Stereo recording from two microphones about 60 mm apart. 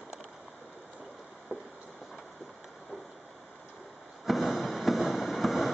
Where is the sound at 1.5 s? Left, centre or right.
Right.